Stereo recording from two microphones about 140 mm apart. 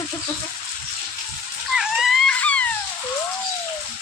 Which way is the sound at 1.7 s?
5° right (ahead or behind).